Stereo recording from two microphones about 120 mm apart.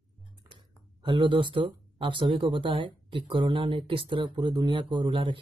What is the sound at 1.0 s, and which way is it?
A man's voice, 45° right (ahead or behind).